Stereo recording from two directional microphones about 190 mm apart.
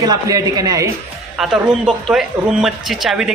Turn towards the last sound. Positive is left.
turn(degrees=0)  # may be behind; listen again after turning